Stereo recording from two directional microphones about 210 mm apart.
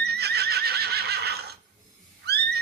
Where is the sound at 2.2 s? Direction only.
50° right (ahead or behind).